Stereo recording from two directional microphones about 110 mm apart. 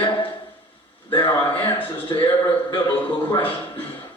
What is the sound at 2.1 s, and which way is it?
Speech, 35° left (ahead or behind).